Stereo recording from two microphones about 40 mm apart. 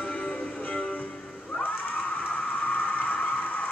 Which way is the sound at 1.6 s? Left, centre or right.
Left.